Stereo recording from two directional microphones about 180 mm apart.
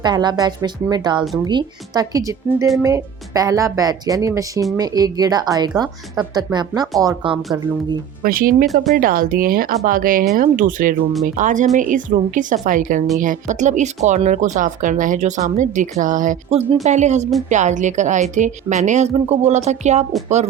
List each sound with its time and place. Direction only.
0.0 s a woman's voice: 25° right (ahead or behind)
8.2 s speech: 55° right (ahead or behind)
8.6 s speech: centre (ahead or behind)
9.0 s speech: 50° right (ahead or behind)